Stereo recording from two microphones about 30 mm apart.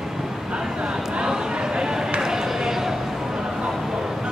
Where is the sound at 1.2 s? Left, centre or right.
Right.